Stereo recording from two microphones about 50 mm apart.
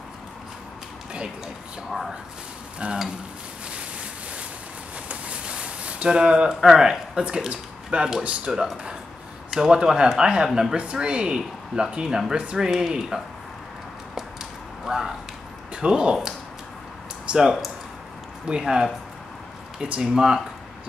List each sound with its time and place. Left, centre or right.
1.9 s speech: centre
2.8 s speech: right
5.0 s a sound: centre
6.6 s speech: centre
14.9 s a sound: centre
15.7 s speech: centre
17.3 s speech: centre